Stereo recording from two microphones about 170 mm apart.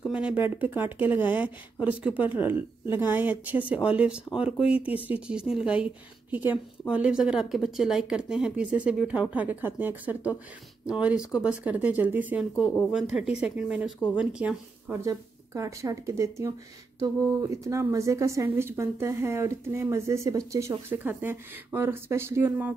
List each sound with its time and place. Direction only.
0.1 s a woman's voice: 5° right (ahead or behind)